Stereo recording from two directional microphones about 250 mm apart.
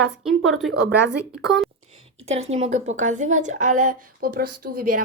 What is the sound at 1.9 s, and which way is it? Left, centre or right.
A woman's voice, right.